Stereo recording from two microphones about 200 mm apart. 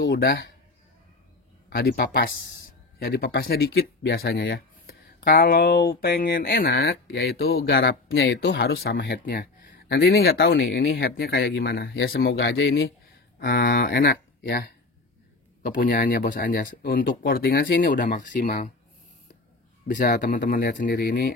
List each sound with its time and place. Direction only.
0.0 s speech: 50° left (ahead or behind)
1.7 s speech: 50° left (ahead or behind)
19.9 s speech: 40° left (ahead or behind)